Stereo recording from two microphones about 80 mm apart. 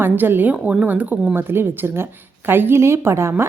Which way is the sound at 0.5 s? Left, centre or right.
Centre.